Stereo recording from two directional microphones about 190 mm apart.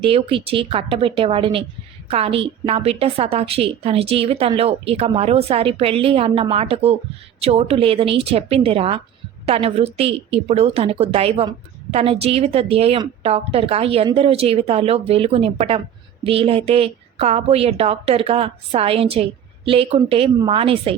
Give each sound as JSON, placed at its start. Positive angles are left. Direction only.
{"t": 0.0, "sound": "a woman's voice", "side_deg": -30}